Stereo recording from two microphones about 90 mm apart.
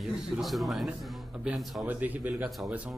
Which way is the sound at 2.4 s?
Centre (ahead or behind).